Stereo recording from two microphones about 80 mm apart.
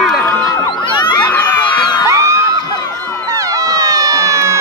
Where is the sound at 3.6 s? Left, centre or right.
Right.